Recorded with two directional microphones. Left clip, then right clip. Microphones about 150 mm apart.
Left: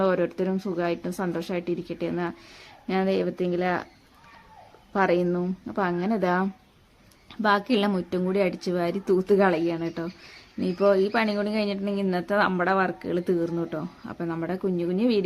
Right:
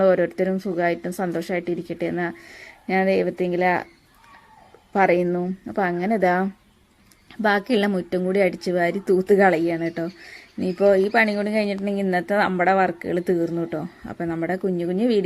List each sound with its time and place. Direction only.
0.0 s speech: 25° right (ahead or behind)
4.9 s speech: 25° right (ahead or behind)